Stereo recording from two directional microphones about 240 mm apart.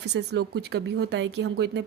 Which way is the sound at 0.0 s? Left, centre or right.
Right.